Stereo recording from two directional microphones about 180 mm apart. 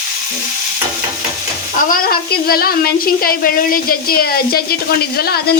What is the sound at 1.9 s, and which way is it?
A woman's voice, 55° left (ahead or behind).